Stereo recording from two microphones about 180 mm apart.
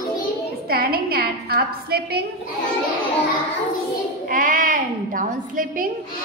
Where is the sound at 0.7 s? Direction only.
60° right (ahead or behind).